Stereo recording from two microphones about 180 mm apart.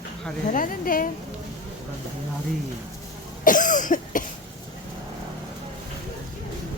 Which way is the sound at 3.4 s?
50° left (ahead or behind).